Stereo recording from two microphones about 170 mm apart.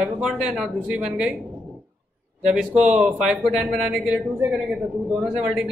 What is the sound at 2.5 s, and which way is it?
Speech, 5° right (ahead or behind).